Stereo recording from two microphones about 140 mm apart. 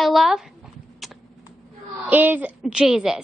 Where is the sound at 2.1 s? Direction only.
10° right (ahead or behind).